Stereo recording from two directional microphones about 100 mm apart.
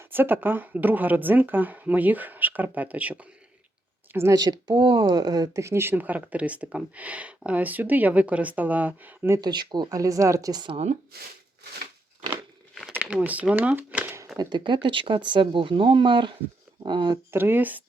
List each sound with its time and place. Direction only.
0.0 s speech: 20° right (ahead or behind)
4.1 s speech: 25° right (ahead or behind)
4.4 s speech: 40° right (ahead or behind)
4.7 s speech: 60° right (ahead or behind); by 5.6 s 40° right (ahead or behind)
5.6 s speech: 25° right (ahead or behind)
9.4 s speech: 45° right (ahead or behind)
12.9 s speech: 15° right (ahead or behind)
14.3 s speech: 50° right (ahead or behind)
17.3 s speech: 20° right (ahead or behind)